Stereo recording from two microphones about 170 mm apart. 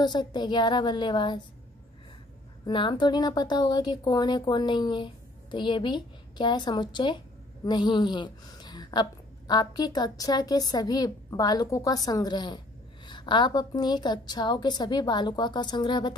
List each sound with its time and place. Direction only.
0.0 s a woman's voice: 25° left (ahead or behind)
2.6 s a woman's voice: 25° left (ahead or behind)